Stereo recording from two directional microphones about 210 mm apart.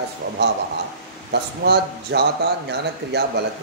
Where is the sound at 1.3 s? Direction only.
50° right (ahead or behind).